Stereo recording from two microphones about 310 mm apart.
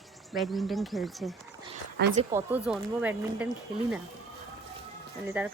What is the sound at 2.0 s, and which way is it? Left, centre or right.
Speech, right.